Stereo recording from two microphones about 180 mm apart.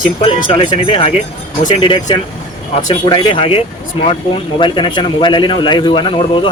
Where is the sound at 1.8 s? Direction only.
30° left (ahead or behind).